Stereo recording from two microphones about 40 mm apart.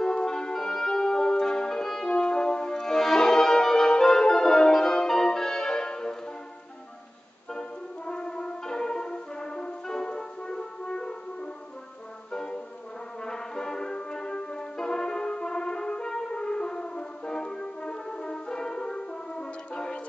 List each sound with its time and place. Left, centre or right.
0.0 s music: centre
2.0 s french horn: left
7.5 s brass instrument: centre
12.3 s music: centre